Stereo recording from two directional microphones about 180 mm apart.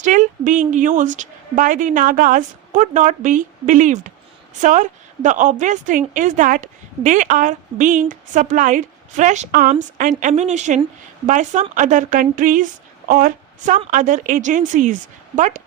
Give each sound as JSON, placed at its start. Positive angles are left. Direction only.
{"t": 0.0, "sound": "a woman's voice", "side_deg": -45}